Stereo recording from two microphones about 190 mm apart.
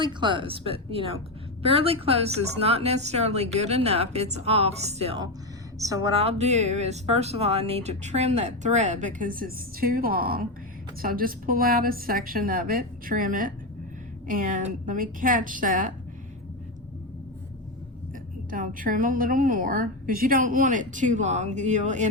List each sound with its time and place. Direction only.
0.0 s speech: 25° right (ahead or behind)
5.8 s a woman's voice: 20° right (ahead or behind); by 15.9 s 45° right (ahead or behind)
18.5 s a woman's voice: 45° right (ahead or behind)